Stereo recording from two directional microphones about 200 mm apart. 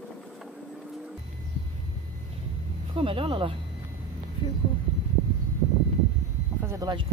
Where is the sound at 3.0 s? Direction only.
25° right (ahead or behind).